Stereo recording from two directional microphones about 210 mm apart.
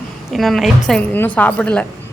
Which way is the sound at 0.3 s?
Centre (ahead or behind).